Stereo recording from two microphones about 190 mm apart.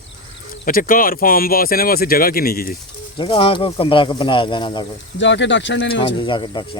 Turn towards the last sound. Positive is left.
turn(degrees=25)  # may be behind; listen again after turning